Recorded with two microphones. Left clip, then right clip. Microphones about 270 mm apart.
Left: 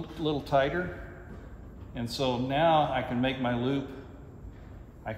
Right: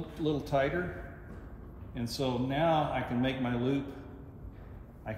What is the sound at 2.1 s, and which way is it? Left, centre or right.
Speech, centre.